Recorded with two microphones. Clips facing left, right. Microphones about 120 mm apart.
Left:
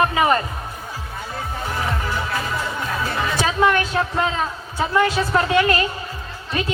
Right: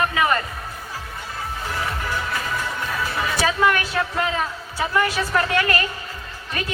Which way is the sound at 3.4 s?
20° left (ahead or behind).